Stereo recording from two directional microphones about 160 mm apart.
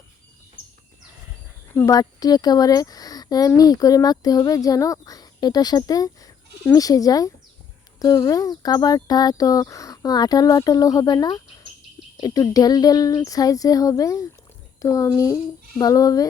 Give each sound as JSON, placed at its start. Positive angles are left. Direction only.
{"t": 1.7, "sound": "speech", "side_deg": 20}